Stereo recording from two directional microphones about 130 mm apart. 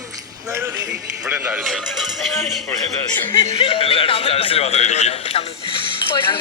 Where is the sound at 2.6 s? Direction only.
15° left (ahead or behind).